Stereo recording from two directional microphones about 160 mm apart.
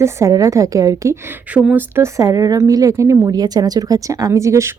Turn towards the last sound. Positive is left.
turn(degrees=-20)  # may be behind; listen again after turning